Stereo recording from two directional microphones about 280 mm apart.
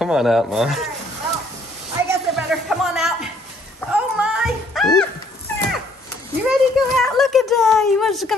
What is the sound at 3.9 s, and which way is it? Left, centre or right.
Music, centre.